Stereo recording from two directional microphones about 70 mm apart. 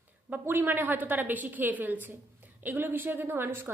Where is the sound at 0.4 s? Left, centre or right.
Right.